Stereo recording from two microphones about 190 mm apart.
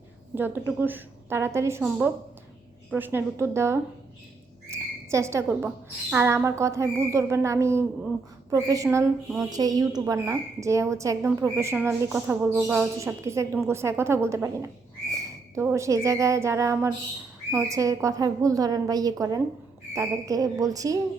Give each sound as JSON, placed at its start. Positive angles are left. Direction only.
{"t": 0.3, "sound": "speech", "side_deg": -10}